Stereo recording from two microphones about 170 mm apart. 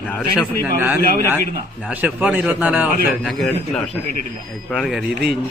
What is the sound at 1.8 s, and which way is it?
A man's voice, 10° right (ahead or behind).